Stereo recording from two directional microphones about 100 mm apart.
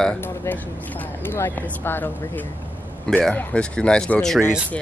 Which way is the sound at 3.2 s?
10° left (ahead or behind).